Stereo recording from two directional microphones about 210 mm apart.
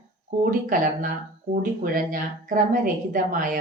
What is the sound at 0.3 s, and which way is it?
A woman's voice, 40° right (ahead or behind).